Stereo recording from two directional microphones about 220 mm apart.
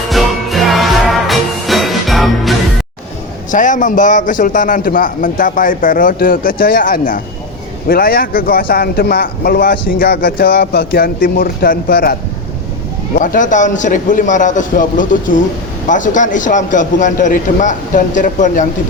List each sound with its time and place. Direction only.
0.1 s music: centre (ahead or behind)
3.5 s a man's voice: 35° left (ahead or behind)
13.1 s a man's voice: 35° left (ahead or behind)